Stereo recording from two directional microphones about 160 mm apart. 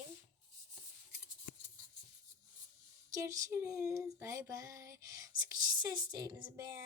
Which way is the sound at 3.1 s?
20° right (ahead or behind).